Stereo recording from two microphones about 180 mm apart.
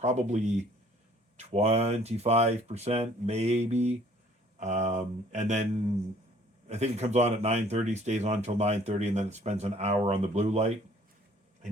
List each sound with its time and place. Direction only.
0.0 s speech: 40° right (ahead or behind)
6.7 s speech: 35° right (ahead or behind)